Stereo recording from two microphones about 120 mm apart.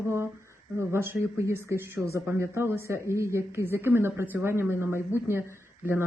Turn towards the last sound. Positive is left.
turn(degrees=-20)  # may be behind; listen again after turning